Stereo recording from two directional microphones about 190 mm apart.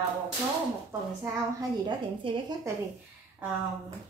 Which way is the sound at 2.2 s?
30° right (ahead or behind).